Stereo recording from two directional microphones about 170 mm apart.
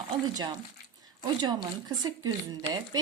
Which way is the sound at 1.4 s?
25° right (ahead or behind).